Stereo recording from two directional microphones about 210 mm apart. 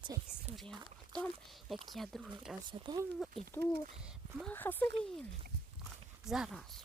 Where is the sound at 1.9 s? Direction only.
Centre (ahead or behind).